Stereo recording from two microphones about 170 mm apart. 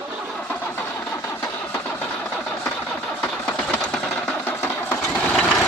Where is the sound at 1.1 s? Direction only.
15° left (ahead or behind).